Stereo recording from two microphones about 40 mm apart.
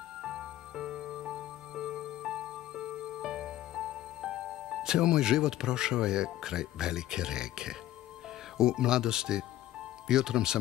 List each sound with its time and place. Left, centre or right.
0.2 s music: centre
8.5 s speech: centre